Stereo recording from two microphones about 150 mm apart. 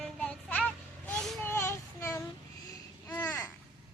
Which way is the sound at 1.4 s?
15° left (ahead or behind).